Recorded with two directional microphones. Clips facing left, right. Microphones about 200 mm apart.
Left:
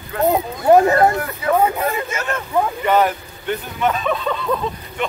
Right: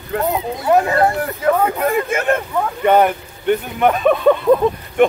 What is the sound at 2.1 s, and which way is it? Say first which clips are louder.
A man's voice: right 5 dB; 55° right (ahead or behind).